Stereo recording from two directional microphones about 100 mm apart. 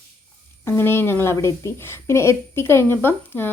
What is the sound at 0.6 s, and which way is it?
A woman's voice, 25° left (ahead or behind).